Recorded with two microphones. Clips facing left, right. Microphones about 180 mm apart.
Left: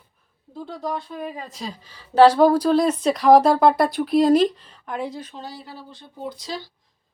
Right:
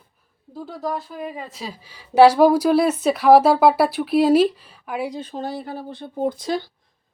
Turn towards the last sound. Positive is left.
turn(degrees=-55)  # may be behind; listen again after turning